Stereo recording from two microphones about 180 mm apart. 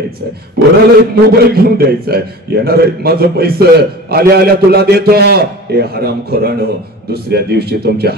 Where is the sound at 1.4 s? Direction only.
60° right (ahead or behind).